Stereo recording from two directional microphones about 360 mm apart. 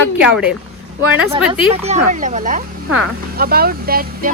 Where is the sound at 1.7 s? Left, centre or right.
Centre.